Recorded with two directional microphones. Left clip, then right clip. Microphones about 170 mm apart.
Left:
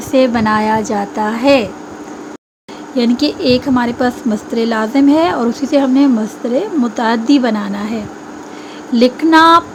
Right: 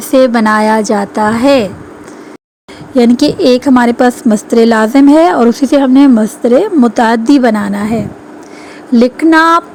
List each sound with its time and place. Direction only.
0.1 s a woman's voice: 35° right (ahead or behind)
2.9 s a woman's voice: 40° right (ahead or behind)